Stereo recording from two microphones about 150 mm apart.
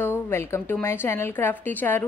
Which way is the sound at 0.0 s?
15° left (ahead or behind).